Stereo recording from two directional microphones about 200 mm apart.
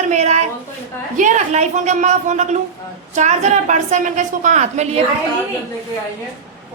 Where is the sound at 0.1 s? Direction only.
35° right (ahead or behind).